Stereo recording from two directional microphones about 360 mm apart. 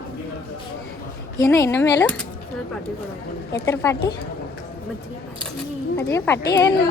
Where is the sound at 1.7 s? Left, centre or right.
Left.